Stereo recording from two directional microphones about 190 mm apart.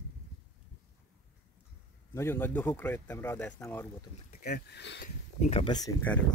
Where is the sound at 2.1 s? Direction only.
15° left (ahead or behind).